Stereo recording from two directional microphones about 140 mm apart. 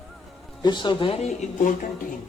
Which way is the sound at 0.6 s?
35° left (ahead or behind).